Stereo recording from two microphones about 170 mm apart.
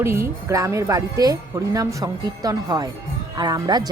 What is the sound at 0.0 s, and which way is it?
Speech, 15° right (ahead or behind).